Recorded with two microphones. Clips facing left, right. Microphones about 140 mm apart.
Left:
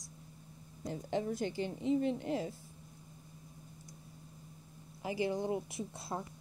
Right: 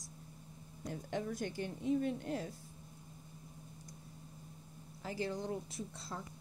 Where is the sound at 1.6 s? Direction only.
70° left (ahead or behind).